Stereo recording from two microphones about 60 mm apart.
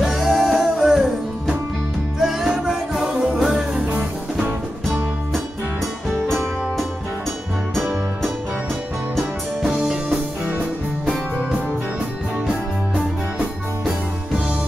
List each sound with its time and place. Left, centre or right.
0.0 s music: centre
2.1 s music: centre
6.0 s music: centre
10.4 s music: right